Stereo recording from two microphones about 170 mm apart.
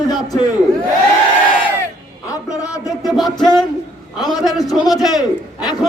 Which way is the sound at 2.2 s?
20° left (ahead or behind).